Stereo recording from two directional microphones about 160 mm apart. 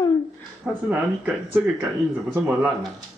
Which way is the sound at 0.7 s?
5° right (ahead or behind).